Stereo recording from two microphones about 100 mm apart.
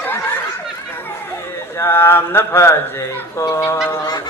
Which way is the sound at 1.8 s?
25° left (ahead or behind).